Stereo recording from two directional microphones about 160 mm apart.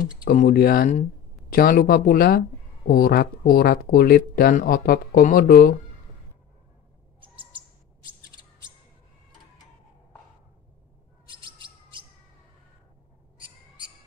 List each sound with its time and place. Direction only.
0.2 s speech: 60° left (ahead or behind)
11.2 s chirp: 30° right (ahead or behind)